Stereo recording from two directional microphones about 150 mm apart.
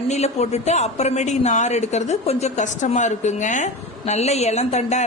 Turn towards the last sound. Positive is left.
turn(degrees=50)  # may be behind; listen again after turning